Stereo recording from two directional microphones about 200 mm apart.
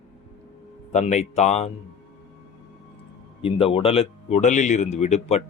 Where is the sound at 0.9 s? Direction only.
35° left (ahead or behind).